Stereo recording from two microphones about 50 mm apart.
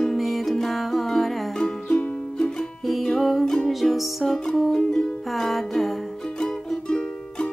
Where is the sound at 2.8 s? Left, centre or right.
Centre.